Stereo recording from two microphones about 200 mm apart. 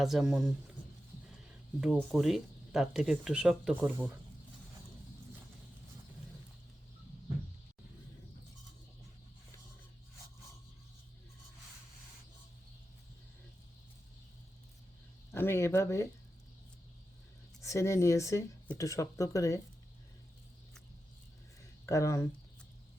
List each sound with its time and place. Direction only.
0.0 s speech: centre (ahead or behind)
1.8 s speech: centre (ahead or behind)
15.3 s a sound: 10° left (ahead or behind)
17.6 s speech: 15° left (ahead or behind)
21.8 s speech: 15° left (ahead or behind)